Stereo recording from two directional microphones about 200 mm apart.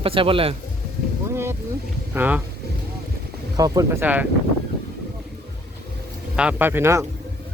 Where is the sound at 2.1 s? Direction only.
10° right (ahead or behind).